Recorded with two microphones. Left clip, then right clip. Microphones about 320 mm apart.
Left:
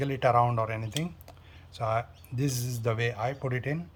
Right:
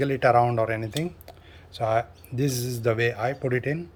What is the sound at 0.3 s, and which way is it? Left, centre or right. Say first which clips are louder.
Speech: right 4 dB; left.